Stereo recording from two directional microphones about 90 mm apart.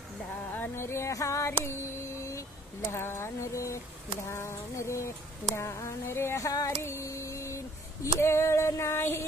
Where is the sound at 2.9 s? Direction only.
30° left (ahead or behind).